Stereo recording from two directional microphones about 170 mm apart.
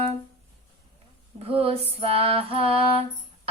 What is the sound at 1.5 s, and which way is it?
Music, 35° right (ahead or behind).